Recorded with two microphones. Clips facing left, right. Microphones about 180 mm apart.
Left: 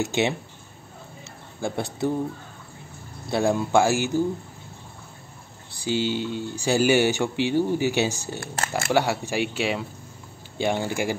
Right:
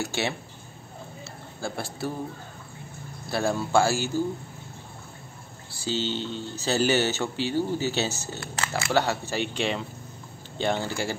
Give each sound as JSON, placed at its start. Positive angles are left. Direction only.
{"t": 0.0, "sound": "speech", "side_deg": 20}
{"t": 1.6, "sound": "a man's voice", "side_deg": 20}
{"t": 3.3, "sound": "speech", "side_deg": 15}
{"t": 5.7, "sound": "speech", "side_deg": 15}
{"t": 8.4, "sound": "speech", "side_deg": 50}
{"t": 8.9, "sound": "speech", "side_deg": 15}